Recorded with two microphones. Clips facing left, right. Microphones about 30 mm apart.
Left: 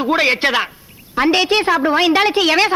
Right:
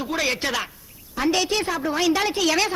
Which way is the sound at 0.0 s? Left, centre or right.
Left.